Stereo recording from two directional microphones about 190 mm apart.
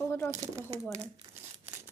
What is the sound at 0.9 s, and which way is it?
Crumpling, 15° right (ahead or behind).